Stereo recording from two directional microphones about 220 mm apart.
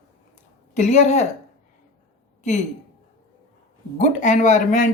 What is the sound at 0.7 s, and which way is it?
Speech, 35° left (ahead or behind).